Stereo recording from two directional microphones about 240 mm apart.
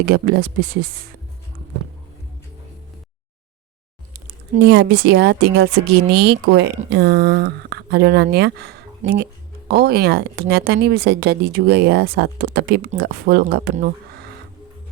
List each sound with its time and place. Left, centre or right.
0.0 s speech: right
4.6 s speech: right